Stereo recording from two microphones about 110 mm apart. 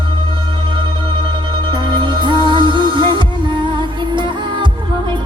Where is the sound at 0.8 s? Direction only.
45° right (ahead or behind).